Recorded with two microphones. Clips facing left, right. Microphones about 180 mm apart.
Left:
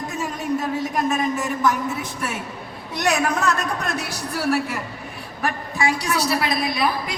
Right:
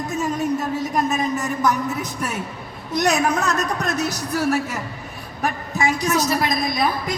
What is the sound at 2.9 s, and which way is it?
A man's voice, 40° right (ahead or behind).